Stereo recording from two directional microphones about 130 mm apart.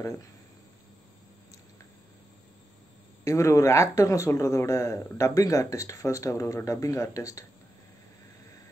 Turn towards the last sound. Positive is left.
turn(degrees=25)  # may be behind; listen again after turning